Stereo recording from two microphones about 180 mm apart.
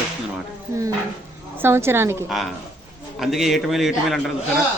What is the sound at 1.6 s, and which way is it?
Speech, 15° right (ahead or behind).